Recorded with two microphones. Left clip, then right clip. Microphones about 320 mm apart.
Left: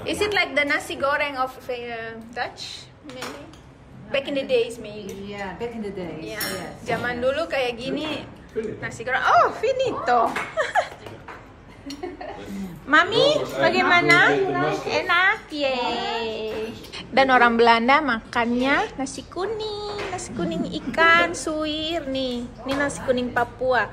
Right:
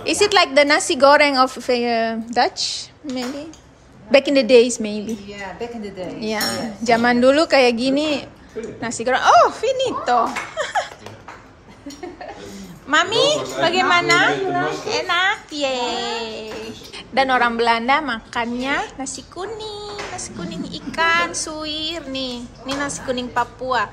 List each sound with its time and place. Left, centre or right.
0.0 s speech: centre
4.1 s a woman's voice: centre
12.8 s a woman's voice: centre